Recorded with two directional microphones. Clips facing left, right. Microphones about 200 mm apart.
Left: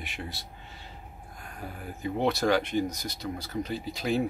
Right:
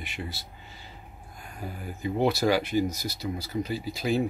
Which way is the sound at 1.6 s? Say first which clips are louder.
Right 2 dB; 5° right (ahead or behind).